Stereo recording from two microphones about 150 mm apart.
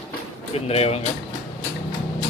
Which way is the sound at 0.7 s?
45° left (ahead or behind).